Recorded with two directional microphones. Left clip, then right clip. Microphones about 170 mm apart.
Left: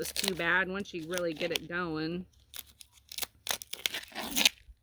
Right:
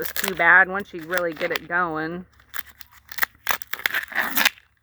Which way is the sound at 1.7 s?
50° left (ahead or behind).